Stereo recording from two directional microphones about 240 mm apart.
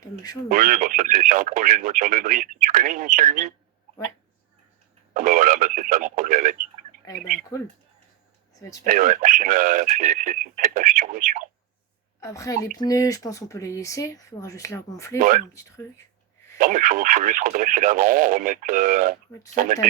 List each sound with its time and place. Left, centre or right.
0.0 s speech: centre
0.4 s speech: right
5.1 s speech: right
7.5 s speech: centre
8.8 s speech: right
12.2 s speech: centre
15.2 s speech: right
16.6 s speech: right